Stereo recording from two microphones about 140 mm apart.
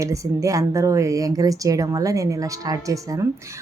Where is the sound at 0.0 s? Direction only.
20° right (ahead or behind).